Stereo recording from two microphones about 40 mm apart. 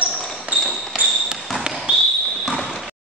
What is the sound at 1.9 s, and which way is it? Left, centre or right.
Basketball bounce, right.